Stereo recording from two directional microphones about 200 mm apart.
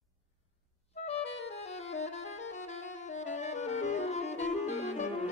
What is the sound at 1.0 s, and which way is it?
Clarinet, 30° left (ahead or behind).